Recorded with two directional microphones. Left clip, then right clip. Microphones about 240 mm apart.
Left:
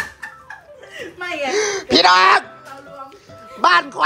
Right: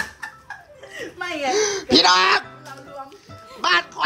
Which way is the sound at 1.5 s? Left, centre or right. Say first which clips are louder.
Left 1 dB; centre.